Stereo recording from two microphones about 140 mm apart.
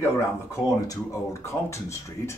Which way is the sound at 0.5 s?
25° left (ahead or behind).